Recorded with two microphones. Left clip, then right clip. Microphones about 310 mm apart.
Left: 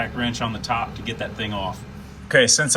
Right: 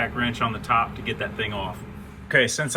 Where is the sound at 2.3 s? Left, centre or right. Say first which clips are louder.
Left 4 dB; centre.